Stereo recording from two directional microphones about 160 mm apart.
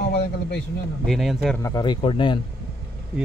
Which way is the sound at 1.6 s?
25° left (ahead or behind).